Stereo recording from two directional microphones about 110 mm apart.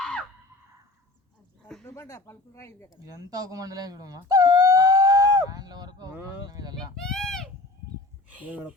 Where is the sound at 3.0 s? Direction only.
35° right (ahead or behind).